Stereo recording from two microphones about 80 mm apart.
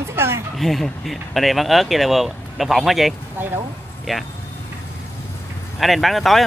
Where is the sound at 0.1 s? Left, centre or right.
Right.